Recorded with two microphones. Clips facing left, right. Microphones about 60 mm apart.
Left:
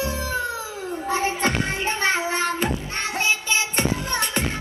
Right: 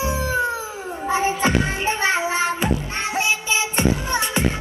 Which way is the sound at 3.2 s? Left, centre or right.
Left.